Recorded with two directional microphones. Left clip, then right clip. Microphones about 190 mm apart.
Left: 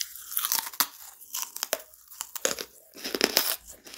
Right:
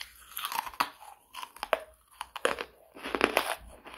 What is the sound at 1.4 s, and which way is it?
Tearing, 55° left (ahead or behind).